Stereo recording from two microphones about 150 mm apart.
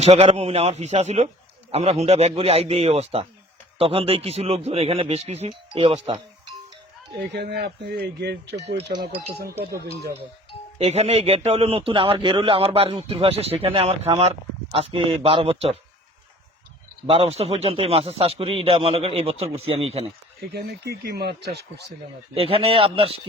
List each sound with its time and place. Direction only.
0.0 s a man's voice: 45° right (ahead or behind)
7.3 s speech: 90° right
10.8 s a man's voice: 45° right (ahead or behind)
17.1 s a man's voice: 40° right (ahead or behind)
20.5 s speech: 90° right
22.4 s a man's voice: 40° right (ahead or behind)